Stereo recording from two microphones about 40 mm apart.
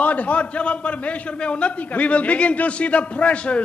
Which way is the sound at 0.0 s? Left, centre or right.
Left.